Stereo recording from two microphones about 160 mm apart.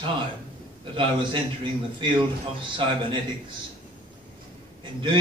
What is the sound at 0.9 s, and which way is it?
A man's voice, 30° right (ahead or behind).